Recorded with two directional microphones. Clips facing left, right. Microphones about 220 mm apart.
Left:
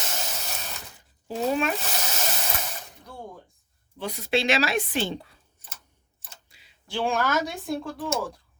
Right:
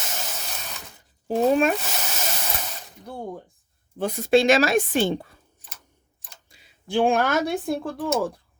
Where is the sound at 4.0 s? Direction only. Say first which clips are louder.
Right 7 dB; 50° right (ahead or behind).